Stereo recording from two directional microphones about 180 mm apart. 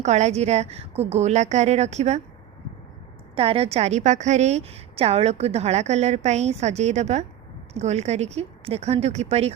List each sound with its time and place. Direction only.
0.0 s a woman's voice: 40° right (ahead or behind)
3.3 s a woman's voice: 30° right (ahead or behind)